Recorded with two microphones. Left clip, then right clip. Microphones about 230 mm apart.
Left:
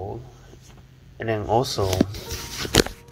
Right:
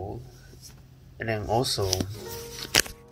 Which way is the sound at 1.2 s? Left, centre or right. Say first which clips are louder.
Left 4 dB; centre.